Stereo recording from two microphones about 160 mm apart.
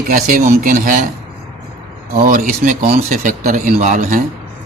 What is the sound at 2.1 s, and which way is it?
Speech, 55° right (ahead or behind).